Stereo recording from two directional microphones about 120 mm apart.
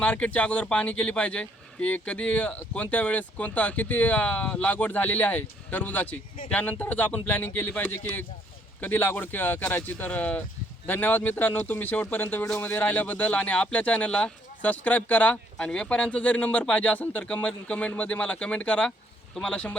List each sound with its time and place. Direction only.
0.0 s a man's voice: 10° left (ahead or behind)